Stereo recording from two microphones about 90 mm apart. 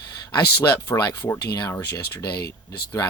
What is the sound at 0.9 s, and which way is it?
Speech, 35° left (ahead or behind).